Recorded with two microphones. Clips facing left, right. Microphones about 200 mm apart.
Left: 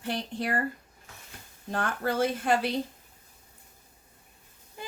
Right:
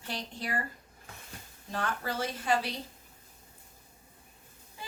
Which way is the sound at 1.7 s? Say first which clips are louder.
Left 5 dB; 55° left (ahead or behind).